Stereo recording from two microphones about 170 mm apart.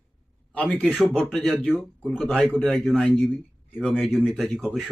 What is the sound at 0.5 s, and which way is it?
Speech, 5° left (ahead or behind).